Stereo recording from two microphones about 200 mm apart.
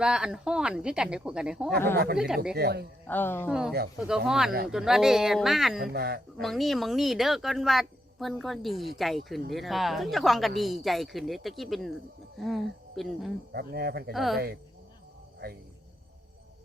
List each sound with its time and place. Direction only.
0.0 s speech: 5° right (ahead or behind)
2.6 s speech: 55° right (ahead or behind)
3.1 s speech: 10° left (ahead or behind)
4.0 s speech: 5° right (ahead or behind)
5.9 s speech: 50° right (ahead or behind)
6.4 s speech: centre (ahead or behind)
13.5 s speech: 50° right (ahead or behind)
14.1 s speech: centre (ahead or behind)